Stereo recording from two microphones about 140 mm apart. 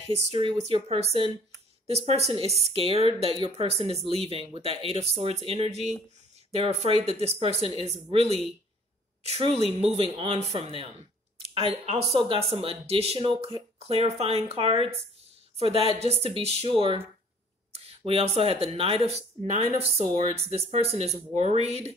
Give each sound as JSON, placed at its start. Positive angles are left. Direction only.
{"t": 0.0, "sound": "speech", "side_deg": -45}
{"t": 13.7, "sound": "speech", "side_deg": -45}